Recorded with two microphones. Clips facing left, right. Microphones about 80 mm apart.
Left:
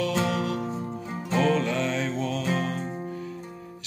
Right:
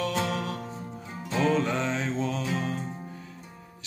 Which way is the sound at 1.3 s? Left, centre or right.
Left.